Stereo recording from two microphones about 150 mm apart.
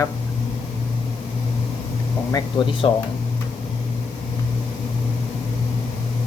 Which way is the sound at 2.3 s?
30° left (ahead or behind).